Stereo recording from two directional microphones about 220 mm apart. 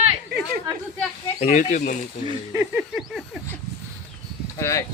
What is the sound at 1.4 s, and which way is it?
Speech, 35° left (ahead or behind).